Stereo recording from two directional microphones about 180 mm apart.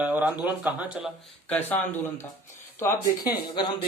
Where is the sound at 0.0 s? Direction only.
10° right (ahead or behind).